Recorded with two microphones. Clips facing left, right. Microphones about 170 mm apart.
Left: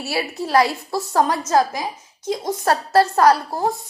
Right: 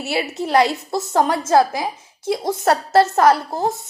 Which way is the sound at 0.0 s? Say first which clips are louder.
Right 2 dB; 20° right (ahead or behind).